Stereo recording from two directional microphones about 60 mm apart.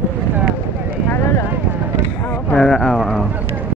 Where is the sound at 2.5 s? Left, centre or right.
Centre.